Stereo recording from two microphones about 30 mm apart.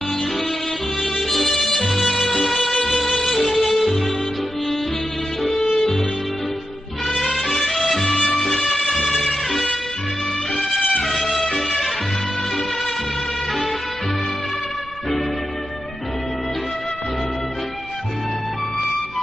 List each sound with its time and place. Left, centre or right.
1.0 s music: centre
5.6 s music: centre
7.3 s music: centre
11.4 s music: centre